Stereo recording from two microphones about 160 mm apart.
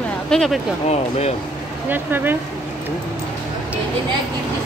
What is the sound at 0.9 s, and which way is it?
Speech, 40° left (ahead or behind).